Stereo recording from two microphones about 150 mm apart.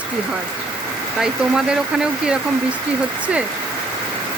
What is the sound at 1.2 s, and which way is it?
Speech, 5° right (ahead or behind).